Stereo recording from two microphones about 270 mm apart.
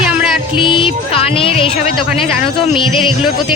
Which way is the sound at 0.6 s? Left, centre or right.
Centre.